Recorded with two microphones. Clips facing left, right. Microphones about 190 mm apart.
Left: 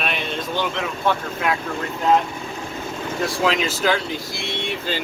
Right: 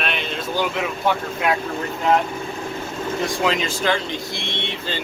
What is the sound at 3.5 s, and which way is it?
Speech, 5° left (ahead or behind).